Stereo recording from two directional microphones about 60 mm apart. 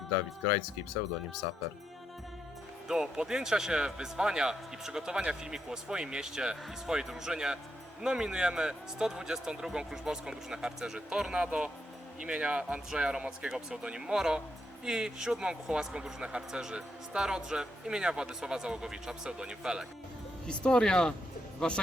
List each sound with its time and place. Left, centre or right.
2.8 s speech: centre
20.7 s speech: centre